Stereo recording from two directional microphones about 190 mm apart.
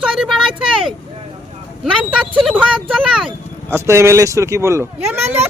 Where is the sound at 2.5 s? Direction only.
5° right (ahead or behind).